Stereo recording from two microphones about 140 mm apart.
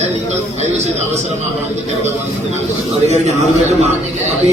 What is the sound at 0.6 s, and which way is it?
Speech, 50° right (ahead or behind).